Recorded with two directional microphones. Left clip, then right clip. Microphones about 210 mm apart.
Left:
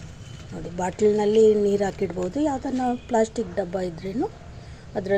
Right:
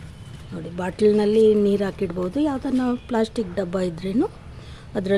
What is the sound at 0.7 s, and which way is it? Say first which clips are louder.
A woman's voice: right 2 dB; 10° right (ahead or behind).